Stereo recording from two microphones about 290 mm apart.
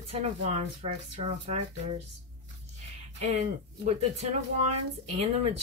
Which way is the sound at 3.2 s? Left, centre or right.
Right.